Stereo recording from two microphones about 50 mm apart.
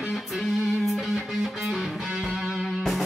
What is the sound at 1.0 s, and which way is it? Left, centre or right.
Music, centre.